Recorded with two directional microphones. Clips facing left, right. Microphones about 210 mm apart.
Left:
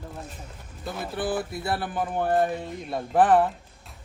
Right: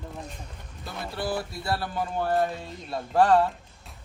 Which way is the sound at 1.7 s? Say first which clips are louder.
Even; 20° left (ahead or behind).